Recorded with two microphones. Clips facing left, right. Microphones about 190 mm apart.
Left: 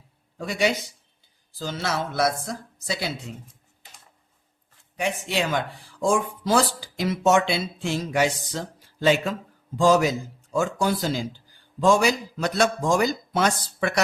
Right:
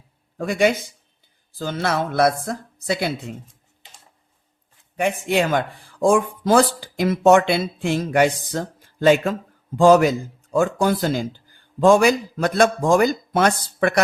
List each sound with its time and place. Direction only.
0.3 s a man's voice: 50° right (ahead or behind)
4.9 s a man's voice: 55° right (ahead or behind)